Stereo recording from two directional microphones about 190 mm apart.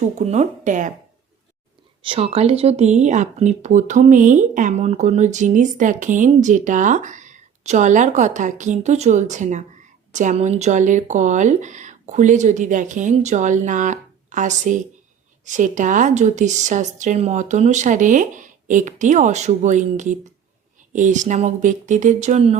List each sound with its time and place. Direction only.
0.2 s speech: 35° right (ahead or behind)
2.0 s speech: 30° right (ahead or behind)